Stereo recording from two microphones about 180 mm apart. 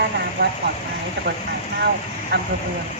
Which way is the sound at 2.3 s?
85° right.